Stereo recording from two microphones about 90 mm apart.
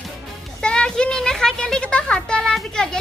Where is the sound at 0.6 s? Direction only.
10° left (ahead or behind).